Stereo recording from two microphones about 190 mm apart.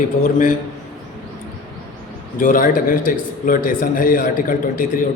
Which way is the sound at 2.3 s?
45° left (ahead or behind).